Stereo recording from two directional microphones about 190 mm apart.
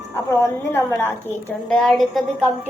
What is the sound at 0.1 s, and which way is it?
A woman's voice, 15° left (ahead or behind).